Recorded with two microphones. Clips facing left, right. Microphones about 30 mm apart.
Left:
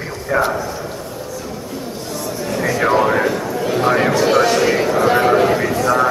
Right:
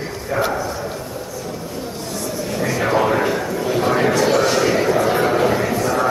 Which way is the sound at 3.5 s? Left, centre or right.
Centre.